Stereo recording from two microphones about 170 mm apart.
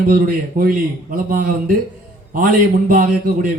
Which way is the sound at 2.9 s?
55° right (ahead or behind).